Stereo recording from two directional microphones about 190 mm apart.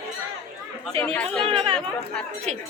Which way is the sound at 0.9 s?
10° left (ahead or behind).